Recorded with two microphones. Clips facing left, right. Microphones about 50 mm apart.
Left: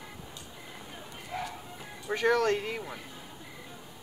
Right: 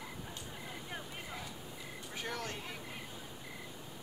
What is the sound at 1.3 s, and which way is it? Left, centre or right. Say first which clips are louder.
Clip-clop: left 13 dB; left.